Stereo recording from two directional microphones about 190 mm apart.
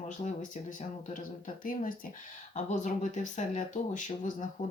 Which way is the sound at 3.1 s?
40° left (ahead or behind).